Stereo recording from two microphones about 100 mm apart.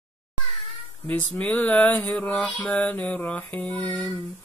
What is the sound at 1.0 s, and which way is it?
Mantra, 10° left (ahead or behind).